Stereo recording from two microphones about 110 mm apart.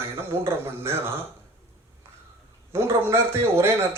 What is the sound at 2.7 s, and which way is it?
A man's voice, 25° right (ahead or behind).